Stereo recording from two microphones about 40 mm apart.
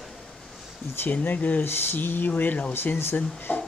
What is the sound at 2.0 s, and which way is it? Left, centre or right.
Speech, left.